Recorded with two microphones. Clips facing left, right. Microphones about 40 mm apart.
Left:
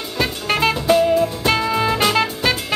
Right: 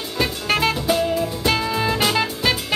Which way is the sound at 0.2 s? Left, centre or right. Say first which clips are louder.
Left 1 dB; centre.